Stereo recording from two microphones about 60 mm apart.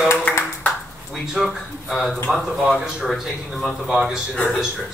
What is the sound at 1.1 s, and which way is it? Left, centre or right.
Speech, centre.